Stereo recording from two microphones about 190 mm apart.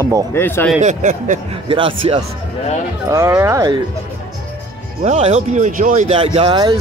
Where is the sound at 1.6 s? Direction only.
30° right (ahead or behind).